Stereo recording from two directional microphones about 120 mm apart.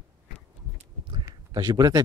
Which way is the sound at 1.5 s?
35° right (ahead or behind).